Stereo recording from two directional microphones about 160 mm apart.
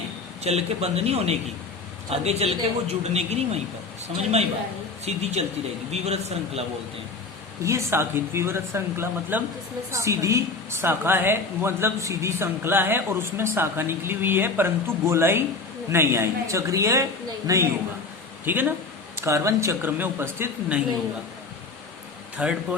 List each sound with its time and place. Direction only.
0.4 s a man's voice: 40° right (ahead or behind)
5.0 s a man's voice: 40° right (ahead or behind)
7.6 s a woman's voice: 20° right (ahead or behind)
22.4 s a woman's voice: 5° right (ahead or behind)